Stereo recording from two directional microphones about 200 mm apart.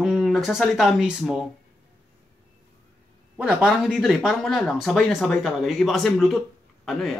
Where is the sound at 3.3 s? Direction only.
5° right (ahead or behind).